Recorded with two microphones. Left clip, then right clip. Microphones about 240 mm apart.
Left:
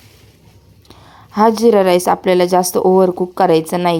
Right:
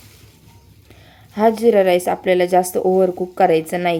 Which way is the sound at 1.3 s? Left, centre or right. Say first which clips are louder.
Left 3 dB; left.